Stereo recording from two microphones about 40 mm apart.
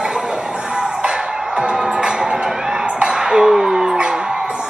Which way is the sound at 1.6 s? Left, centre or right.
Right.